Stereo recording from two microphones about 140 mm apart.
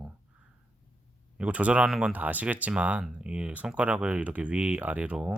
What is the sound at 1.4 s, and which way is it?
Speech, 10° right (ahead or behind).